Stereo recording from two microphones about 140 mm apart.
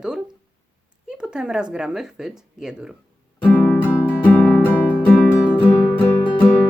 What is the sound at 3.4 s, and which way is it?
Guitar, 15° left (ahead or behind).